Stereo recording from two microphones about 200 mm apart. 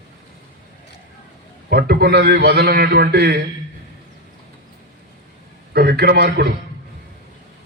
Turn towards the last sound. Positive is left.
turn(degrees=-50)  # may be behind; listen again after turning